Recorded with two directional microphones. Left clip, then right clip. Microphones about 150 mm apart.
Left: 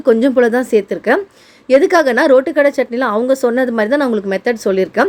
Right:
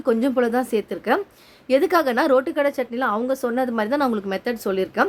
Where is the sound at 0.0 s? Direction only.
20° left (ahead or behind).